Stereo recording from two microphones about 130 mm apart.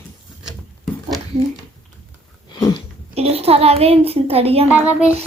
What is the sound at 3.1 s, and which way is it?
A child's voice, 50° right (ahead or behind).